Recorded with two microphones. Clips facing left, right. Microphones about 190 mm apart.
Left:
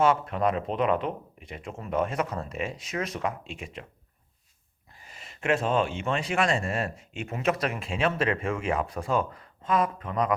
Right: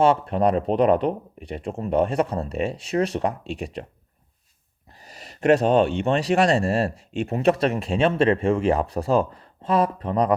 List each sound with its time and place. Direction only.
0.0 s speech: 30° right (ahead or behind)
4.9 s a sound: 40° right (ahead or behind)
6.0 s speech: 35° right (ahead or behind)